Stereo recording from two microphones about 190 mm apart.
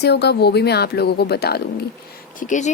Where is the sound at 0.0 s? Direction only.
60° left (ahead or behind).